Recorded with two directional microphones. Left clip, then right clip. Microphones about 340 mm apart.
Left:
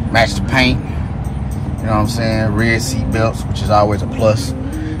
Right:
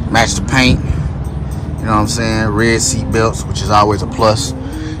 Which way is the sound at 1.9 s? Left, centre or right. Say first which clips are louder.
Right 3 dB; centre.